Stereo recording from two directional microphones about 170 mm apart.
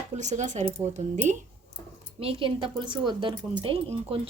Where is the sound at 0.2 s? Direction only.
45° right (ahead or behind).